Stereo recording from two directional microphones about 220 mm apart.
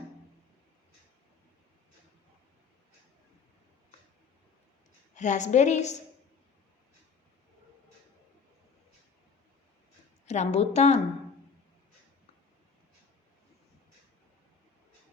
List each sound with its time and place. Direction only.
5.1 s a woman's voice: 35° left (ahead or behind)
10.2 s a woman's voice: 30° left (ahead or behind)